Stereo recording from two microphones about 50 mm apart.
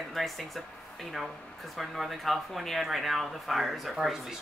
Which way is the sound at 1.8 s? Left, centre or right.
Centre.